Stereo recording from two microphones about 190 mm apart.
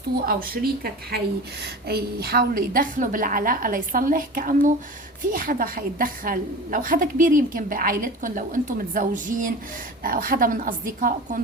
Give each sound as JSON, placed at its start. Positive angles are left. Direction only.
{"t": 0.3, "sound": "a woman's voice", "side_deg": -50}